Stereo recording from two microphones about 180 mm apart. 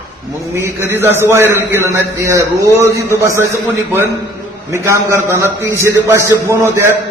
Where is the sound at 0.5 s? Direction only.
15° right (ahead or behind).